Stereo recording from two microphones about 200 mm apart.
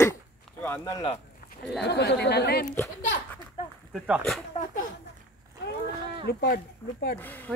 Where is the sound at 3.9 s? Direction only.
Centre (ahead or behind).